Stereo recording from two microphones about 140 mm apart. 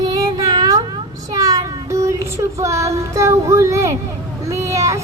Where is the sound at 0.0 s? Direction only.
25° right (ahead or behind).